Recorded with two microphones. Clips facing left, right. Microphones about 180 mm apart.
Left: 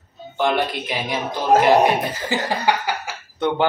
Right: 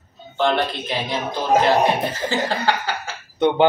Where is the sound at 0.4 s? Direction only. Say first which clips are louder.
Even; 10° left (ahead or behind).